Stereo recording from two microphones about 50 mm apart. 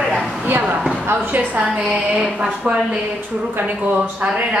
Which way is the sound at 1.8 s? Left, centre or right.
Centre.